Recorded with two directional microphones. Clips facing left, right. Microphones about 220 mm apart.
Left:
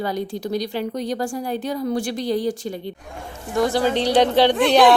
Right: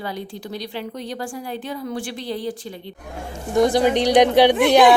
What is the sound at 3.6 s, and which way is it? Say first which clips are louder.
Speech: right 3 dB; 20° right (ahead or behind).